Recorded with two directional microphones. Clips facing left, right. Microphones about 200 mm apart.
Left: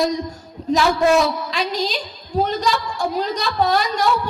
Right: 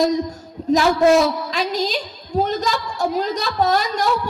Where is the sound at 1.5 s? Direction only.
40° right (ahead or behind).